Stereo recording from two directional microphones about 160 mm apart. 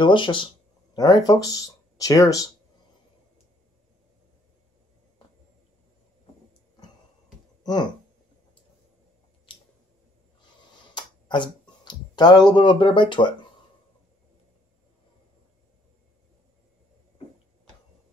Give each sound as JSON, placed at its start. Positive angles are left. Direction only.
{"t": 0.0, "sound": "speech", "side_deg": 30}
{"t": 7.6, "sound": "speech", "side_deg": 25}
{"t": 9.5, "sound": "squish", "side_deg": 30}
{"t": 11.0, "sound": "a sound", "side_deg": 30}